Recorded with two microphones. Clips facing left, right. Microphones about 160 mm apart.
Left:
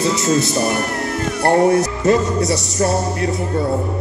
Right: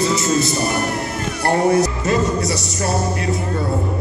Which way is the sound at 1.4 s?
55° left (ahead or behind).